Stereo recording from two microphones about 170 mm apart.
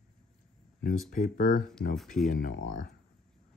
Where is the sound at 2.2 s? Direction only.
50° left (ahead or behind).